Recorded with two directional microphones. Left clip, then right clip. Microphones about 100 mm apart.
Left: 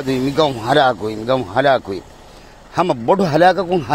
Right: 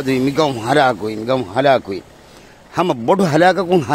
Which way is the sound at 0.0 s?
45° right (ahead or behind).